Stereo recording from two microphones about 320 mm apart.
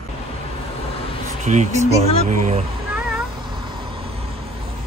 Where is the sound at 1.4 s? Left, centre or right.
Right.